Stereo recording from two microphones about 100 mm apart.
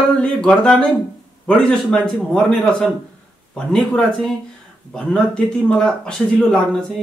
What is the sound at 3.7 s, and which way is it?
Speech, 5° left (ahead or behind).